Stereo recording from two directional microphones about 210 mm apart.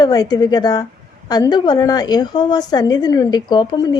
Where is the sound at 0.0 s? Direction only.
20° left (ahead or behind).